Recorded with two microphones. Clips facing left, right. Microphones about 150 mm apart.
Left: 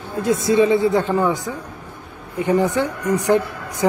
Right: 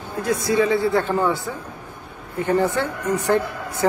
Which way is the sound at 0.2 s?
25° left (ahead or behind).